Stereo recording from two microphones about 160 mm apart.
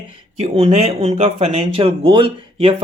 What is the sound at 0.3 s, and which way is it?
Speech, 40° right (ahead or behind).